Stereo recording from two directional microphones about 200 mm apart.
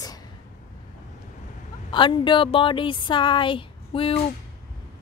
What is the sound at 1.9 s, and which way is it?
Speech, 25° left (ahead or behind).